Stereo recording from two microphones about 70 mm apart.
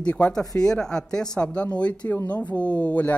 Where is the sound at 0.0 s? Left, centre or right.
Centre.